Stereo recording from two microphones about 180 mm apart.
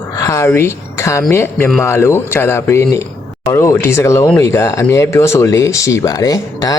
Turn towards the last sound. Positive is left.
turn(degrees=20)  # may be behind; listen again after turning